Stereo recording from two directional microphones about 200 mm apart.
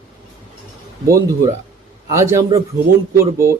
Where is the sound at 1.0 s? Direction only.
15° right (ahead or behind).